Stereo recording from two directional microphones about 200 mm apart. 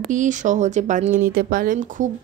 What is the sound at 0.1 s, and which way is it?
A woman's voice, 40° right (ahead or behind).